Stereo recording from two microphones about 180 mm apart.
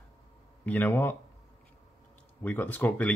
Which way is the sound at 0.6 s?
10° left (ahead or behind).